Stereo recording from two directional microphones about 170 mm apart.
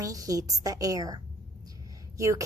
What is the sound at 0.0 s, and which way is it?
A woman's voice, 20° right (ahead or behind).